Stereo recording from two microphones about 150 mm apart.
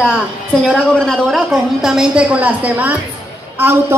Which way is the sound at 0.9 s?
Centre (ahead or behind).